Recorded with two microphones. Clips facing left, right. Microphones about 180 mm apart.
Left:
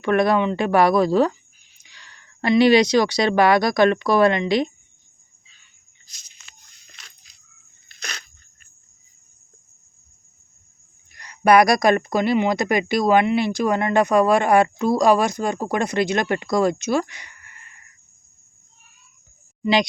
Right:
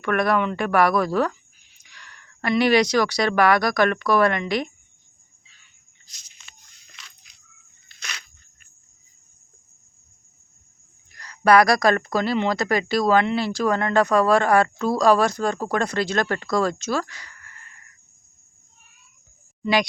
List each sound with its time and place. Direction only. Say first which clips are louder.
0.0 s speech: left 3 dB; 25° left (ahead or behind)
7.0 s keys jangling: right 2 dB; 45° left (ahead or behind)
7.9 s a sound: left 3 dB; 40° left (ahead or behind)
11.2 s speech: left 1 dB; 20° left (ahead or behind)
19.6 s speech: left 2 dB; 20° left (ahead or behind)